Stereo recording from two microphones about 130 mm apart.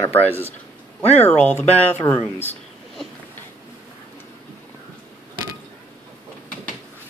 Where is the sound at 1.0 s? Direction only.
55° left (ahead or behind).